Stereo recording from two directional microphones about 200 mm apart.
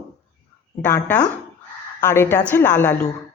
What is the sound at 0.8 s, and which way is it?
A woman's voice, 10° left (ahead or behind).